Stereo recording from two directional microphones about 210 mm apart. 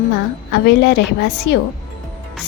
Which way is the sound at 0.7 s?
55° left (ahead or behind).